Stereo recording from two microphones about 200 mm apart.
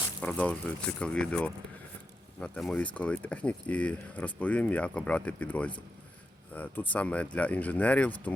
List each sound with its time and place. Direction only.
0.2 s speech: 5° left (ahead or behind)